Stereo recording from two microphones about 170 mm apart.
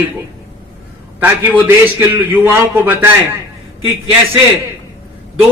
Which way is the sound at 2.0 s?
10° right (ahead or behind).